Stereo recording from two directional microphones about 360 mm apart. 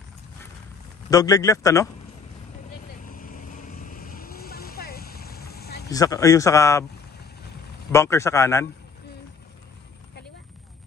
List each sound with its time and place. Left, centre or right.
1.1 s a man's voice: centre
3.1 s vehicle: left
5.9 s a man's voice: centre
7.9 s a man's voice: centre